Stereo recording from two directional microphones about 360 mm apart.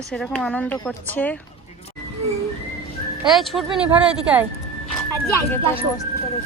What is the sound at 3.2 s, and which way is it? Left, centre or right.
Speech, centre.